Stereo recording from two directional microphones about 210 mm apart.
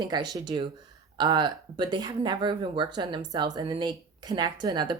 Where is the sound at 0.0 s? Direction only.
20° right (ahead or behind).